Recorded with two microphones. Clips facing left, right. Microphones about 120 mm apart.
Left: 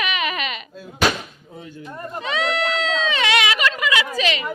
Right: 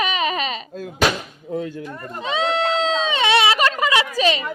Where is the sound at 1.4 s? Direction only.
70° right (ahead or behind).